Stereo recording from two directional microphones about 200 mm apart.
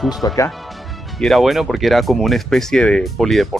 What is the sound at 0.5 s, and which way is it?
Speech, centre (ahead or behind).